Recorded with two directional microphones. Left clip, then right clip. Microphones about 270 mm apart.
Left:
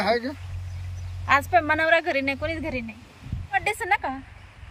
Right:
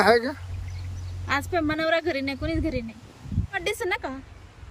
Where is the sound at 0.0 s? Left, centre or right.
Right.